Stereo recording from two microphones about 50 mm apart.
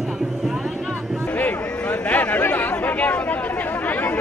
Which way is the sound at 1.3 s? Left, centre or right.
Left.